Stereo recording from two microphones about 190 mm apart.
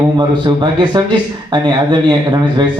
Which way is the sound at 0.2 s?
25° right (ahead or behind).